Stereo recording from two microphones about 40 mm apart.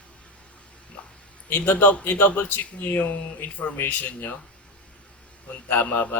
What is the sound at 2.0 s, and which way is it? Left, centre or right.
Speech, left.